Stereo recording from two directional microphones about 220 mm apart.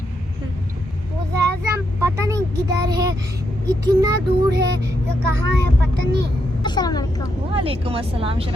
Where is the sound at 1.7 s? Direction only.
15° right (ahead or behind).